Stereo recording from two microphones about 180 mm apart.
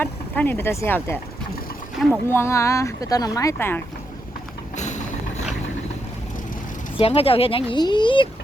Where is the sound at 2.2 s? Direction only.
15° left (ahead or behind).